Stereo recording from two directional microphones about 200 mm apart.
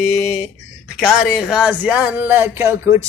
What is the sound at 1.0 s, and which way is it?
Speech, centre (ahead or behind).